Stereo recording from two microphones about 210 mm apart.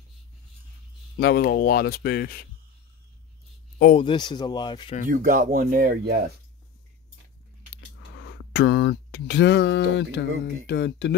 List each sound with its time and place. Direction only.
1.2 s speech: 50° left (ahead or behind)
4.0 s speech: 20° left (ahead or behind)
5.0 s speech: 40° right (ahead or behind)
8.2 s speech: 55° left (ahead or behind)